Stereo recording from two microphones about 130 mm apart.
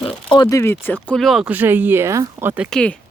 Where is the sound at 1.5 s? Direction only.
15° right (ahead or behind).